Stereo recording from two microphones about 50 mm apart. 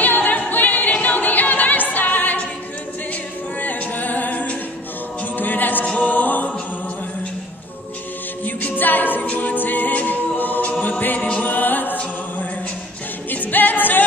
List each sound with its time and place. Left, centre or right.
0.0 s a capella: left
3.6 s a capella: left
5.4 s music: left
8.5 s a capella: left
9.3 s music: left
13.3 s music: left